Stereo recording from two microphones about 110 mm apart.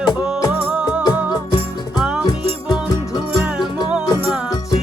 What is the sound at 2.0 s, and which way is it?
Music, 10° right (ahead or behind).